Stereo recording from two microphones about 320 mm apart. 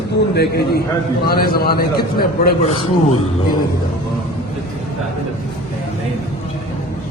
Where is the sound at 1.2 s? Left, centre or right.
Left.